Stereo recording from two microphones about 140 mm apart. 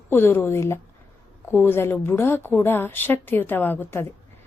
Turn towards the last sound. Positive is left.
turn(degrees=15)  # may be behind; listen again after turning